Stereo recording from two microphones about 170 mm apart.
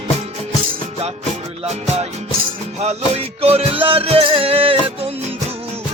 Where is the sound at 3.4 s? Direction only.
35° right (ahead or behind).